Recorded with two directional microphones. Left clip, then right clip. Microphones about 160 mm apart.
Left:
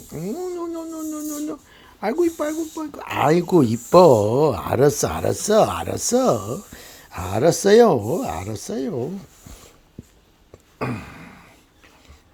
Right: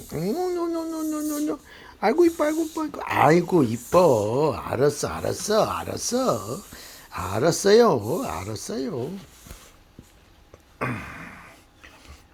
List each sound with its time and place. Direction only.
0.1 s speech: 5° left (ahead or behind)
3.4 s speech: 45° left (ahead or behind)
4.0 s speech: 70° left (ahead or behind); by 9.2 s 30° left (ahead or behind)
10.8 s a sound: 40° left (ahead or behind)